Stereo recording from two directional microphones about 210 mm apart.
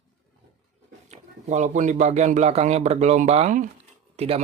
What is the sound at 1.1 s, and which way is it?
Speech, 35° right (ahead or behind).